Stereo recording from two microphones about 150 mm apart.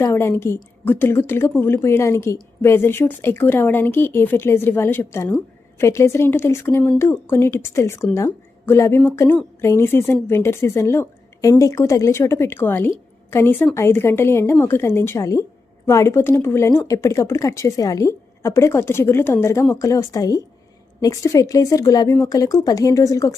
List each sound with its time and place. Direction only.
0.0 s a woman's voice: 15° left (ahead or behind)